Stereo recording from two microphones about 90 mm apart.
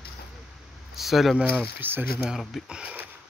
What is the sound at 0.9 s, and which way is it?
Speech, centre (ahead or behind).